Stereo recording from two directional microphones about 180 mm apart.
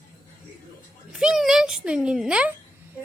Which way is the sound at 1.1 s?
5° right (ahead or behind).